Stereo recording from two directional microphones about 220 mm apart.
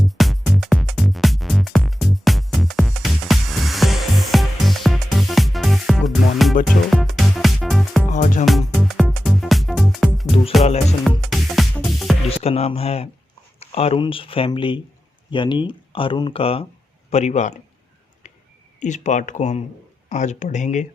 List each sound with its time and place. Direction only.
0.2 s music: centre (ahead or behind)
8.1 s music: 35° left (ahead or behind)
8.4 s music: centre (ahead or behind)
11.3 s music: centre (ahead or behind)
12.3 s a sound: 30° left (ahead or behind)
13.6 s speech: 25° left (ahead or behind)
18.8 s speech: 35° left (ahead or behind)